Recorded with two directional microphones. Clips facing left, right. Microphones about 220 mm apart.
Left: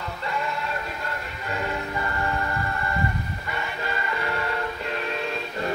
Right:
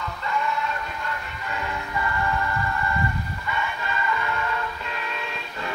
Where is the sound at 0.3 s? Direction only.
35° left (ahead or behind).